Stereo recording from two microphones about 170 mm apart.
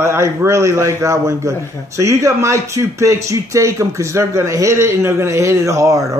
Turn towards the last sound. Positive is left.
turn(degrees=-20)  # may be behind; listen again after turning